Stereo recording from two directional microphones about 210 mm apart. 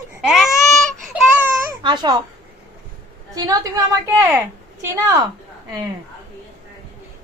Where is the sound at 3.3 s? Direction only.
15° right (ahead or behind).